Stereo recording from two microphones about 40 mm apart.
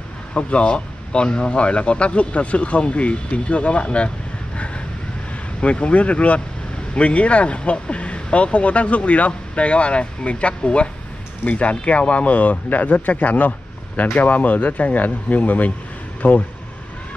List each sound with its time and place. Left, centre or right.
0.3 s speech: left
5.6 s speech: left